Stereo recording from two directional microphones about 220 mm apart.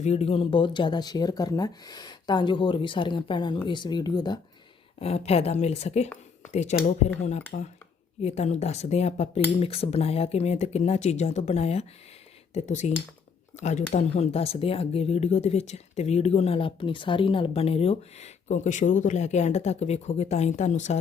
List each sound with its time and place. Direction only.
0.0 s speech: 30° left (ahead or behind)